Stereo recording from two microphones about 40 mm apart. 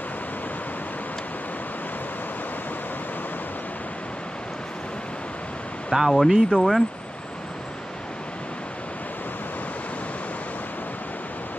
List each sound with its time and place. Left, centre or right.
5.9 s speech: centre